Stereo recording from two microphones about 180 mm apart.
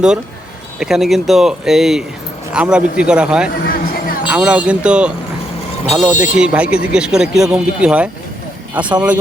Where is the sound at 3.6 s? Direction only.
55° left (ahead or behind).